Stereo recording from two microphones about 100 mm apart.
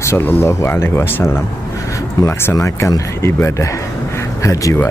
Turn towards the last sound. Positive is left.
turn(degrees=30)  # may be behind; listen again after turning